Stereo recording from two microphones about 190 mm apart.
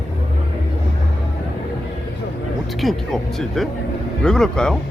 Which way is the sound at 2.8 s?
Centre (ahead or behind).